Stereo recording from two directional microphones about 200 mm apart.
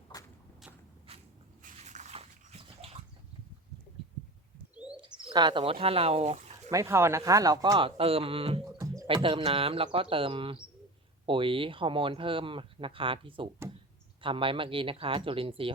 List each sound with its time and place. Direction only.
0.1 s walk: 20° left (ahead or behind)
1.6 s bathtub: 35° right (ahead or behind)
4.7 s bird: 5° right (ahead or behind)
4.9 s speech: 25° right (ahead or behind)
6.7 s speech: 15° right (ahead or behind)